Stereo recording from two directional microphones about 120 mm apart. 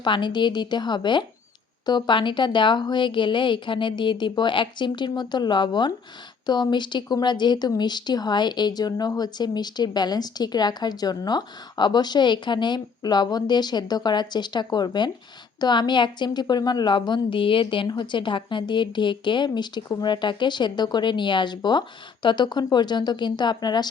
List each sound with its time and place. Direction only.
0.0 s speech: 40° left (ahead or behind)